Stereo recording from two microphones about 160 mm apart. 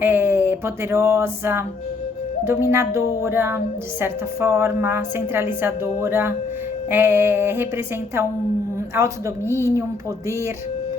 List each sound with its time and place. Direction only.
0.0 s a woman's voice: 15° right (ahead or behind)
9.0 s a woman's voice: 20° right (ahead or behind)